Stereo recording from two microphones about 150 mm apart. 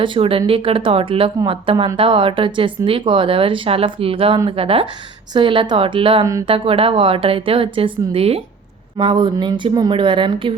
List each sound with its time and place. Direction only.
0.0 s speech: 35° right (ahead or behind)